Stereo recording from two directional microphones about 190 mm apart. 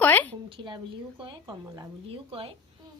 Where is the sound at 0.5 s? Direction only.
25° right (ahead or behind).